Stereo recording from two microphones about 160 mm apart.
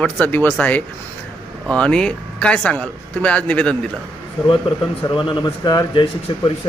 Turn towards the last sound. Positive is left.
turn(degrees=30)  # may be behind; listen again after turning